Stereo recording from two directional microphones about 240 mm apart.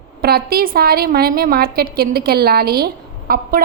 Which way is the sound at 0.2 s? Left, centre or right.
Right.